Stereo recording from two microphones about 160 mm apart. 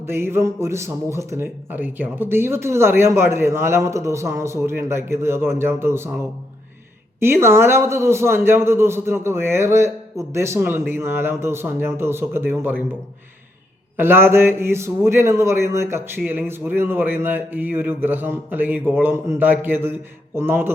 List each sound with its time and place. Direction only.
0.1 s a man's voice: 15° right (ahead or behind)
7.2 s a man's voice: 15° right (ahead or behind)
13.9 s a man's voice: 15° right (ahead or behind)